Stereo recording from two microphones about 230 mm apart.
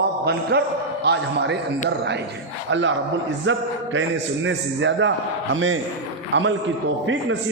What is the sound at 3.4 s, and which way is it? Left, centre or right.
A man's voice, right.